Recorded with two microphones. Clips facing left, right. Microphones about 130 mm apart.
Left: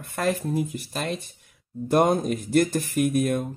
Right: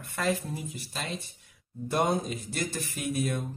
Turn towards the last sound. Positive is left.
turn(degrees=50)  # may be behind; listen again after turning